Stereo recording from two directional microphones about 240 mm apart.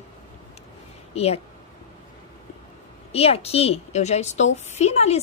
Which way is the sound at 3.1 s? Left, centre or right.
Left.